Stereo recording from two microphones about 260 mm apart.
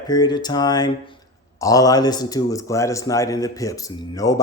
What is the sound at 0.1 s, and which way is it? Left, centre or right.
A man's voice, centre.